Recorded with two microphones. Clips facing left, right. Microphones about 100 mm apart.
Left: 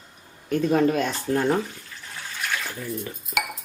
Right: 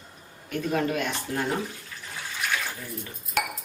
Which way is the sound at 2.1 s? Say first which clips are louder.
Even; 5° right (ahead or behind).